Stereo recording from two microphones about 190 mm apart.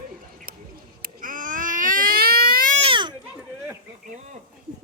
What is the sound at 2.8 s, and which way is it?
Baby cry, 25° right (ahead or behind).